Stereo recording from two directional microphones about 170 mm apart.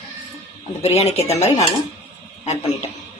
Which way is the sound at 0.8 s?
40° left (ahead or behind).